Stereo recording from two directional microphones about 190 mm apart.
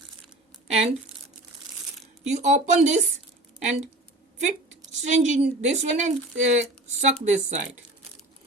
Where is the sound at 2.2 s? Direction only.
35° right (ahead or behind).